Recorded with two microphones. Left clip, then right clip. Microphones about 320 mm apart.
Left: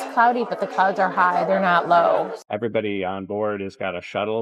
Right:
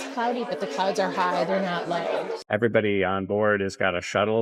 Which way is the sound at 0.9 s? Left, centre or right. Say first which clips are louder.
Left 5 dB; centre.